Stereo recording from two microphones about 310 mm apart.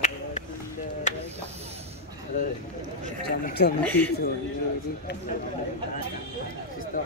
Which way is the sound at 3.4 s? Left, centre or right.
Left.